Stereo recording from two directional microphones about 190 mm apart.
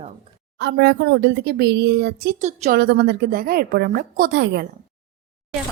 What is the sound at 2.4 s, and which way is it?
Speech, 40° right (ahead or behind).